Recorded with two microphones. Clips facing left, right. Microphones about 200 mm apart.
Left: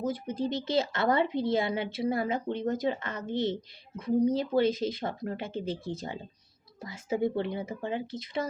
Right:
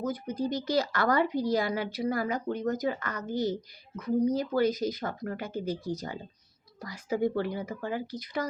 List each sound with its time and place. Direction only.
0.0 s speech: 25° left (ahead or behind)